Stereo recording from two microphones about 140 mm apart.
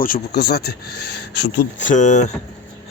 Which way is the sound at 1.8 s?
60° left (ahead or behind).